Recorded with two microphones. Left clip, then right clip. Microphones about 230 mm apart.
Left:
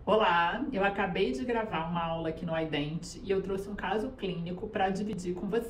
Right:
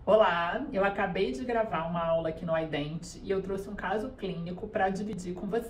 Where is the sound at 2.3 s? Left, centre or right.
Centre.